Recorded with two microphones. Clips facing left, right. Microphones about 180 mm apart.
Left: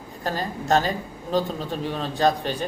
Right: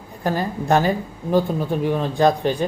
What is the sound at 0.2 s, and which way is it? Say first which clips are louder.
Speech: right 5 dB; 15° right (ahead or behind).